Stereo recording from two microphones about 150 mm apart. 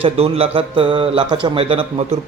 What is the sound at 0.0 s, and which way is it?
A man's voice, 40° right (ahead or behind).